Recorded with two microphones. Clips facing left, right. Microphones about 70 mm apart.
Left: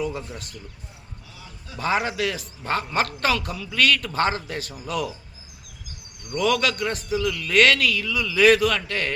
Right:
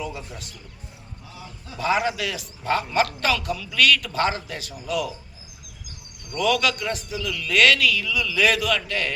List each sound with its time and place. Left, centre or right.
0.1 s a man's voice: left
1.8 s a man's voice: left
3.5 s a man's voice: left
6.2 s a man's voice: left
7.2 s speech: centre
7.5 s a man's voice: left